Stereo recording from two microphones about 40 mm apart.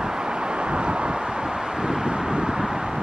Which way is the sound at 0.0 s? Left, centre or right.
Centre.